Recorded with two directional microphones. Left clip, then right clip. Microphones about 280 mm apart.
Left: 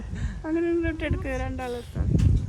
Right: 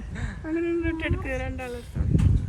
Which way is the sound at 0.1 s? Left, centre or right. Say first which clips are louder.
Right 6 dB; centre.